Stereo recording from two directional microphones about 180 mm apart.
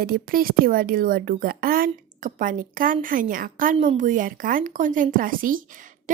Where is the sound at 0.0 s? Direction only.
55° right (ahead or behind).